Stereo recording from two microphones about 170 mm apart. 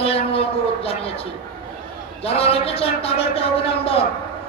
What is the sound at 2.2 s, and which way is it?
A woman's voice, 35° left (ahead or behind).